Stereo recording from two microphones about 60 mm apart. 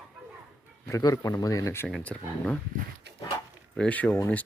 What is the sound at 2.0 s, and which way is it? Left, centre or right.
Speech, centre.